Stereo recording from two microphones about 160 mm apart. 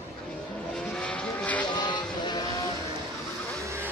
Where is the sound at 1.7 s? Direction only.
30° left (ahead or behind).